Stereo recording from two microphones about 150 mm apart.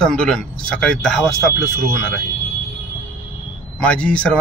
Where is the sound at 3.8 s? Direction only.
10° left (ahead or behind).